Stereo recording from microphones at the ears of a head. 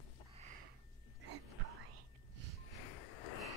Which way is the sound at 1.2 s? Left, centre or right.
Right.